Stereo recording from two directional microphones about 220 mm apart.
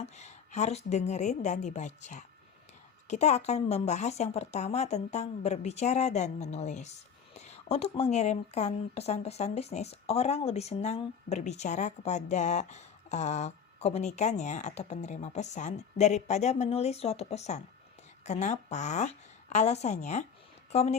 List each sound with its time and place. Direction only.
0.0 s a woman's voice: 30° left (ahead or behind)